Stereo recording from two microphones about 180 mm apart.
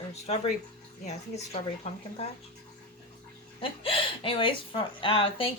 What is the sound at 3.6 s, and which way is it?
Speech, 30° left (ahead or behind).